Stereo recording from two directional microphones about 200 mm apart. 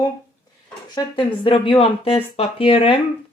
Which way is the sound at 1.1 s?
25° left (ahead or behind).